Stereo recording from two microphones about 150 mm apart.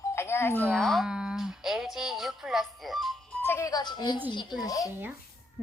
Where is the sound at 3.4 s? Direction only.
20° left (ahead or behind).